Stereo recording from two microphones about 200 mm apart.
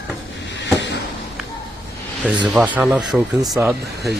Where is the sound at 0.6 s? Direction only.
60° left (ahead or behind).